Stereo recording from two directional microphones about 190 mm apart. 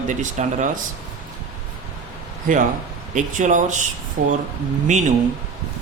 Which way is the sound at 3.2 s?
40° right (ahead or behind).